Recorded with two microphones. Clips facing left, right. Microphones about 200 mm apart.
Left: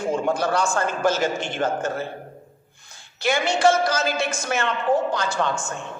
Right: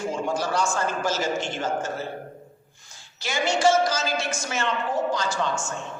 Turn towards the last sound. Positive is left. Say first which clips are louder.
# left 2 dB
turn(degrees=55)  # may be behind; listen again after turning